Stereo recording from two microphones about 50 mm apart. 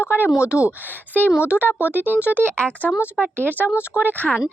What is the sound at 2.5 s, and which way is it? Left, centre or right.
Speech, left.